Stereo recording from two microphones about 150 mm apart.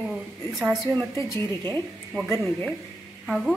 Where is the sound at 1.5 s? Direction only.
25° right (ahead or behind).